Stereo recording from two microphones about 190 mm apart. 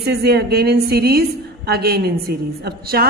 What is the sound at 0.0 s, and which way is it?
A woman's voice, 60° right (ahead or behind).